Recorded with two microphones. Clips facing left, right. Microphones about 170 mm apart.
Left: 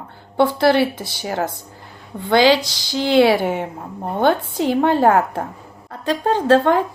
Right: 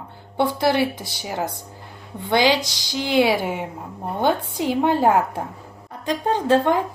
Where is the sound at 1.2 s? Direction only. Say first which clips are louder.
Left 4 dB; 55° left (ahead or behind).